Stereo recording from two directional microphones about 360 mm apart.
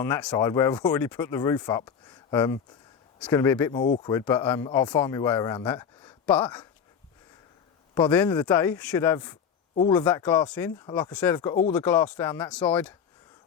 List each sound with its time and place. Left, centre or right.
0.0 s speech: centre
7.9 s speech: centre